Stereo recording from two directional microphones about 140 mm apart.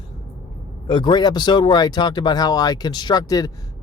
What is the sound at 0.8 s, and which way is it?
Speech, 35° left (ahead or behind).